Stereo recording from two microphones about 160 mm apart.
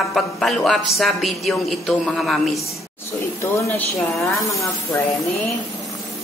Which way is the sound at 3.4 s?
15° left (ahead or behind).